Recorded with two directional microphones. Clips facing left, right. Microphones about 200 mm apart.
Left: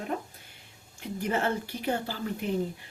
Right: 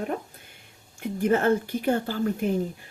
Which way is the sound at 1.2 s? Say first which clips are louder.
Right 7 dB; 50° right (ahead or behind).